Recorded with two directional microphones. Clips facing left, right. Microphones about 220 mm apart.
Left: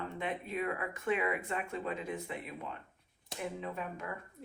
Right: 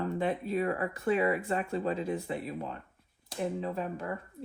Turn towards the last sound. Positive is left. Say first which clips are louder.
# right 6 dB
turn(degrees=-35)  # may be behind; listen again after turning